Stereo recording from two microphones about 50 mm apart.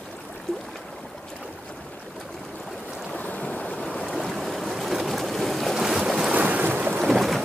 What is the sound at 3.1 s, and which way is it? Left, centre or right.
Boat, left.